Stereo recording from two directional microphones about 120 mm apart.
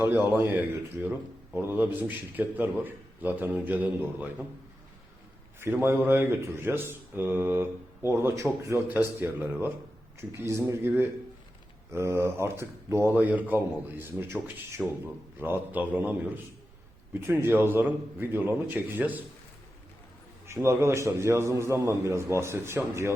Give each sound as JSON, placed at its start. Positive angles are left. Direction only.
{"t": 0.3, "sound": "a man's voice", "side_deg": -20}
{"t": 5.5, "sound": "a man's voice", "side_deg": -20}
{"t": 20.5, "sound": "speech", "side_deg": -20}